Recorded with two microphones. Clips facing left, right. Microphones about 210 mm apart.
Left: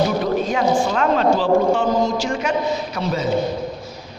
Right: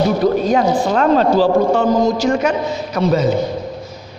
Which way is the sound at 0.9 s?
40° right (ahead or behind).